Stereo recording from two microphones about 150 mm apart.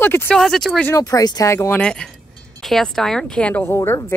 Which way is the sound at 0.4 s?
Centre (ahead or behind).